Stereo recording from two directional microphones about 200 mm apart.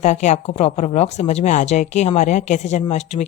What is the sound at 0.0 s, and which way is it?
A woman's voice, 35° left (ahead or behind).